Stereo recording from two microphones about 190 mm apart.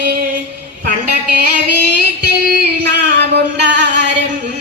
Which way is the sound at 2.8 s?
65° right (ahead or behind).